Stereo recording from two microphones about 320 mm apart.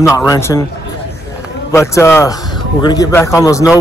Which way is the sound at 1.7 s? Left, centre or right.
Centre.